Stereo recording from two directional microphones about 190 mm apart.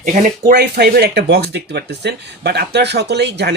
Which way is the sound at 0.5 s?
60° right (ahead or behind).